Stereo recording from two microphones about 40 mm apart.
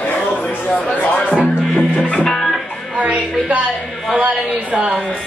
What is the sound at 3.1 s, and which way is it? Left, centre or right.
Speech, right.